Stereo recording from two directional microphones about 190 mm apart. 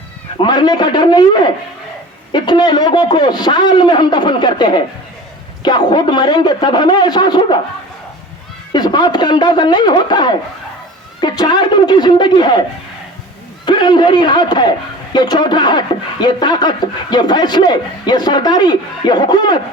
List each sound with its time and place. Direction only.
0.4 s speech: 25° left (ahead or behind)
8.7 s speech: 20° left (ahead or behind)
13.7 s speech: 25° left (ahead or behind)